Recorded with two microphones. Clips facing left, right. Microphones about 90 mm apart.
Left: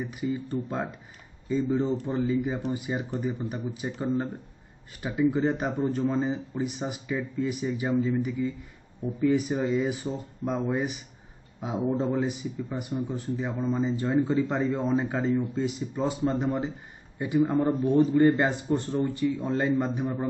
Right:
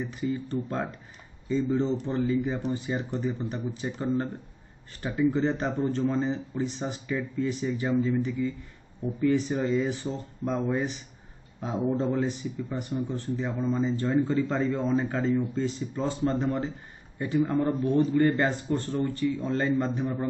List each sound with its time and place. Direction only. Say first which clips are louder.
0.0 s speech: even; 10° left (ahead or behind)